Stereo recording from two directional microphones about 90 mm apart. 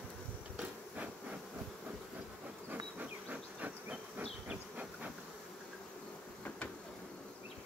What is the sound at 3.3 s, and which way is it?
Insect, 15° right (ahead or behind).